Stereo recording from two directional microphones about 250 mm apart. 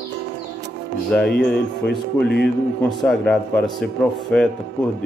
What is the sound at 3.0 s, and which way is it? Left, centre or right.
Speech, centre.